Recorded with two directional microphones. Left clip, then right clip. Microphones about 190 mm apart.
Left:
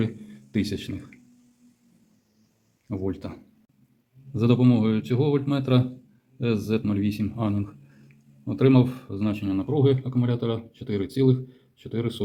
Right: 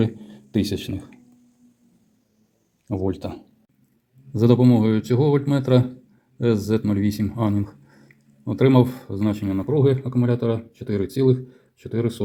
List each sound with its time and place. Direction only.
0.0 s a sound: 15° right (ahead or behind)
2.8 s speech: 15° right (ahead or behind)
4.3 s a man's voice: 30° right (ahead or behind)